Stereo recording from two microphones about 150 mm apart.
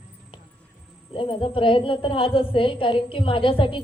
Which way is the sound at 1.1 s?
35° left (ahead or behind).